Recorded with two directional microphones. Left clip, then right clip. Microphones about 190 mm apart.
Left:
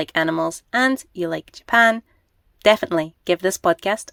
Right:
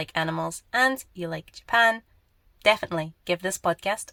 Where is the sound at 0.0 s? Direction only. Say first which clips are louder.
Left 7 dB; 35° left (ahead or behind).